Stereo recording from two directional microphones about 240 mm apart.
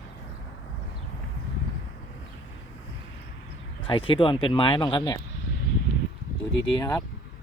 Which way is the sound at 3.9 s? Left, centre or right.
Left.